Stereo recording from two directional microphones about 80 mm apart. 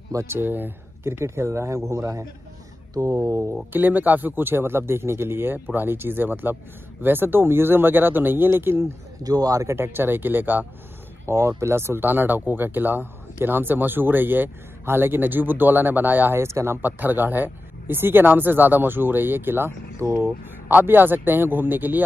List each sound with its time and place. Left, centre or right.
0.1 s speech: right
0.4 s speech: right
3.7 s speech: right
9.2 s speech: right
9.8 s speech: right